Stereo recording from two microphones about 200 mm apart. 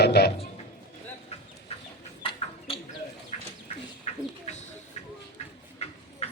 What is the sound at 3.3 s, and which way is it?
Duck, 35° left (ahead or behind).